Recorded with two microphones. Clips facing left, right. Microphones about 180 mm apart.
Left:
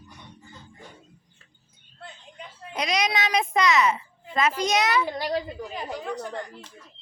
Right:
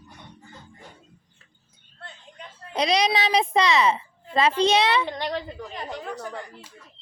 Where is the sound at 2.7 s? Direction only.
30° right (ahead or behind).